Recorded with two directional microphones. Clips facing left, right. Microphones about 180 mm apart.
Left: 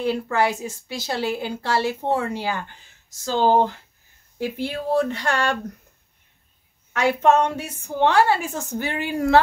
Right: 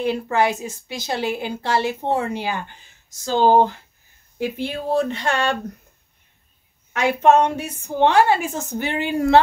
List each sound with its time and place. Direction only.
0.0 s speech: 20° right (ahead or behind)
6.9 s speech: 15° right (ahead or behind)